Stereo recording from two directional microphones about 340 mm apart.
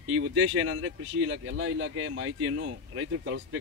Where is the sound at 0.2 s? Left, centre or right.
Right.